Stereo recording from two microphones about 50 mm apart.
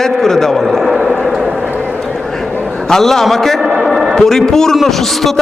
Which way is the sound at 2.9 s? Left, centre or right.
Centre.